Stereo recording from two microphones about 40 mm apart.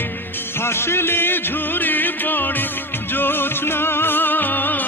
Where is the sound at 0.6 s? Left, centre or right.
Left.